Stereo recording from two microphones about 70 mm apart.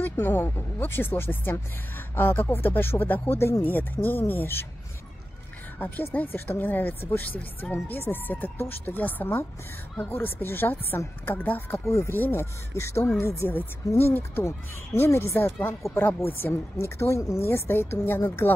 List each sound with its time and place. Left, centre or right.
0.0 s speech: left
5.8 s speech: left
11.7 s speech: left
13.5 s speech: left
15.8 s speech: left
16.3 s speech: left